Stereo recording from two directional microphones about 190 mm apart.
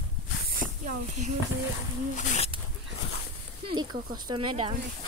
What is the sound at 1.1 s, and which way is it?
Speech, 40° right (ahead or behind).